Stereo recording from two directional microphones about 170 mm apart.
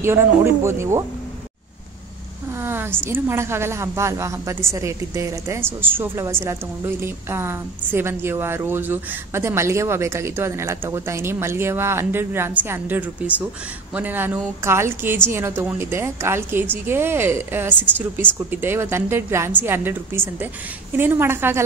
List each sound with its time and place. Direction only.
0.0 s a woman's voice: 15° right (ahead or behind)
2.6 s a woman's voice: 15° right (ahead or behind)